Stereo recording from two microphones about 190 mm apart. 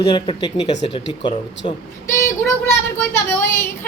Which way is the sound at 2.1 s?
15° left (ahead or behind).